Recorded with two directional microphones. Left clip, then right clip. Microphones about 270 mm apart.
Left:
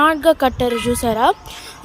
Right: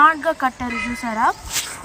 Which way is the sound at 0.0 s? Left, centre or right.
Centre.